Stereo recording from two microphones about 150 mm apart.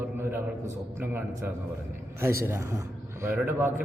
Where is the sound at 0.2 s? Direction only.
15° right (ahead or behind).